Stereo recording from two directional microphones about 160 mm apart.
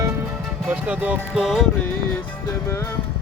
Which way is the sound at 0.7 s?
10° right (ahead or behind).